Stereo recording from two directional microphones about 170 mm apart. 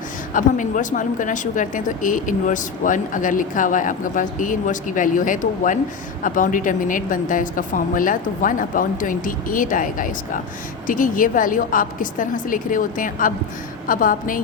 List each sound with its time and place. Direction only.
0.3 s a woman's voice: 50° left (ahead or behind)